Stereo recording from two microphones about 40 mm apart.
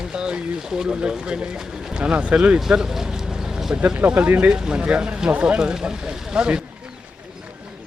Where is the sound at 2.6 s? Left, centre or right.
Centre.